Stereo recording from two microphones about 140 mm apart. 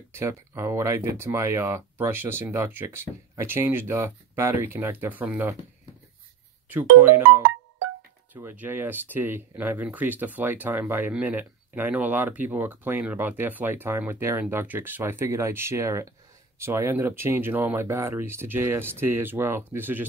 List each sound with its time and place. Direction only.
0.1 s speech: 20° right (ahead or behind)
6.7 s speech: 15° right (ahead or behind)